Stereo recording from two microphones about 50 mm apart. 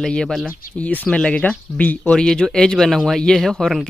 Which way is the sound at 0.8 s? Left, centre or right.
Left.